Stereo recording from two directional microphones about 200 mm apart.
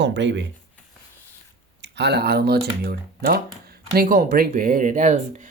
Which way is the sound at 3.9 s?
45° right (ahead or behind).